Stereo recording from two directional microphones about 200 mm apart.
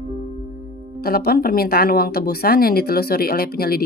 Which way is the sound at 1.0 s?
50° left (ahead or behind).